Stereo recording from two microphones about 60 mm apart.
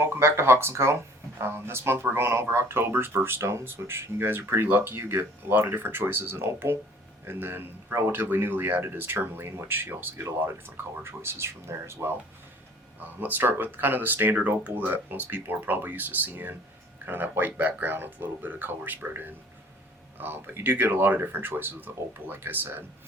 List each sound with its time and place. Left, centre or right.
0.0 s speech: right
13.0 s speech: right